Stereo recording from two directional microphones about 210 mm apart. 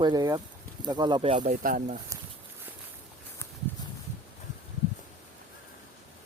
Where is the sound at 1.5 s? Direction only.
40° right (ahead or behind).